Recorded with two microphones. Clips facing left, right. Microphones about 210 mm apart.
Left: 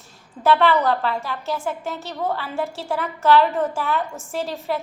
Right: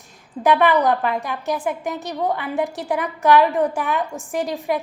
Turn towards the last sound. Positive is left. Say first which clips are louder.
# right 3 dB
turn(degrees=-15)  # may be behind; listen again after turning